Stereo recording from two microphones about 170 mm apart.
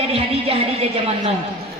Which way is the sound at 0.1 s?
35° right (ahead or behind).